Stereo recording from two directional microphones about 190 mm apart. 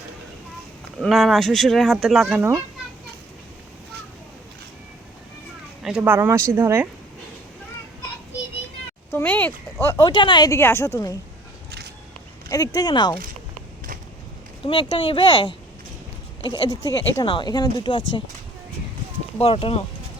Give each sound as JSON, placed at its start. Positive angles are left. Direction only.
{"t": 0.9, "sound": "speech", "side_deg": 0}
{"t": 5.8, "sound": "speech", "side_deg": -5}
{"t": 9.1, "sound": "speech", "side_deg": 10}
{"t": 12.5, "sound": "speech", "side_deg": 20}
{"t": 14.6, "sound": "speech", "side_deg": 25}
{"t": 16.6, "sound": "speech", "side_deg": 20}
{"t": 19.4, "sound": "speech", "side_deg": 30}